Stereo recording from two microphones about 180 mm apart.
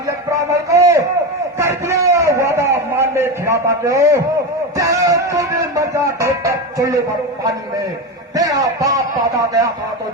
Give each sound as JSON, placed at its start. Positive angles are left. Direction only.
{"t": 0.3, "sound": "a sound", "side_deg": -15}
{"t": 4.8, "sound": "speech", "side_deg": -20}
{"t": 8.4, "sound": "a man's voice", "side_deg": -20}